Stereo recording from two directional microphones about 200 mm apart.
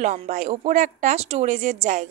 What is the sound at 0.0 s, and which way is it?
A woman's voice, 35° right (ahead or behind).